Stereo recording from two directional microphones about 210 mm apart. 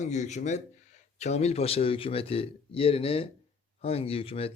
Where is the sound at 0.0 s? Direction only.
35° left (ahead or behind).